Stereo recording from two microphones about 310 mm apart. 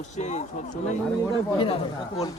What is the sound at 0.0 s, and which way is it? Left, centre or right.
Speech, left.